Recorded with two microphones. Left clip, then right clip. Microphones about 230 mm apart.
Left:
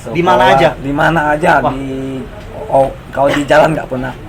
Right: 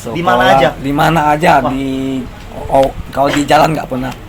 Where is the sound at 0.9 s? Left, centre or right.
Right.